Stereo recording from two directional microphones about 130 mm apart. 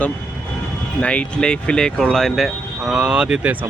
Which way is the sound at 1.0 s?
10° left (ahead or behind).